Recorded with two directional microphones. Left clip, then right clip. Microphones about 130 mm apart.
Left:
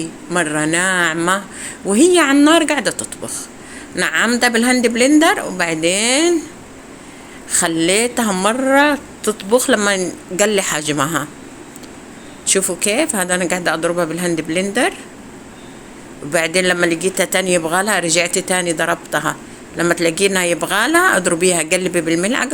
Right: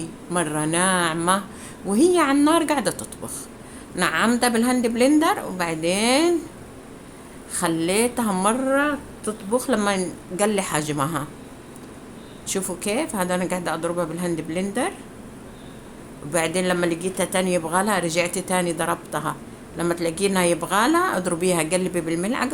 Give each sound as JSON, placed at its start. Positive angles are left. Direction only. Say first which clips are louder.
{"t": 0.3, "sound": "speech", "louder": "left 7 dB", "side_deg": 15}
{"t": 7.5, "sound": "speech", "louder": "left 7 dB", "side_deg": 25}
{"t": 8.6, "sound": "speech", "louder": "left 8 dB", "side_deg": 50}
{"t": 9.5, "sound": "speech", "louder": "left 9 dB", "side_deg": 35}
{"t": 9.7, "sound": "speech", "louder": "left 7 dB", "side_deg": 20}
{"t": 12.5, "sound": "speech", "louder": "left 9 dB", "side_deg": 25}
{"t": 16.3, "sound": "speech", "louder": "left 7 dB", "side_deg": 25}